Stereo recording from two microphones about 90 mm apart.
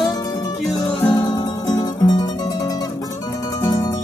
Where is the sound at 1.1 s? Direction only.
50° left (ahead or behind).